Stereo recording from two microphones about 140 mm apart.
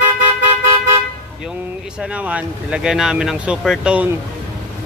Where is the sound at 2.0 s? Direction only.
10° right (ahead or behind).